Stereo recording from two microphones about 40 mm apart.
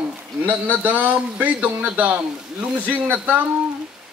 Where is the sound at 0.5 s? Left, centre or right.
Right.